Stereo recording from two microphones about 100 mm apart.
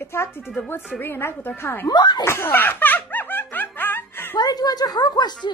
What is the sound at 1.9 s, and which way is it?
Speech, 45° left (ahead or behind).